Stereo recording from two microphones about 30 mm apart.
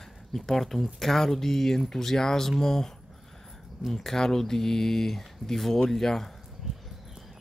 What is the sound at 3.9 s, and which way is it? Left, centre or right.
Speech, centre.